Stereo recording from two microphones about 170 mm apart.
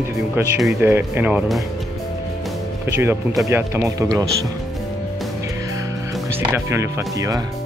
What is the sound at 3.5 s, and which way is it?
Speech, 15° right (ahead or behind).